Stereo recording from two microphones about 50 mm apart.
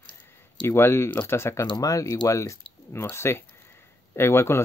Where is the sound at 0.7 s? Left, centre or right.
Left.